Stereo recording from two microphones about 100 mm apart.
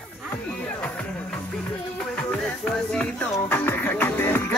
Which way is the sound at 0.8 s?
15° left (ahead or behind).